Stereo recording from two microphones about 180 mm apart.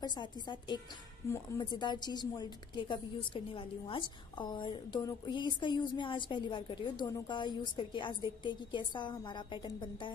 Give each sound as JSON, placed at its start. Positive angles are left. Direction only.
{"t": 0.0, "sound": "a woman's voice", "side_deg": 25}